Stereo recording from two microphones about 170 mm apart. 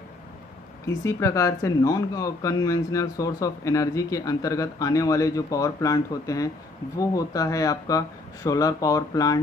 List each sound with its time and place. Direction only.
0.8 s speech: 15° left (ahead or behind)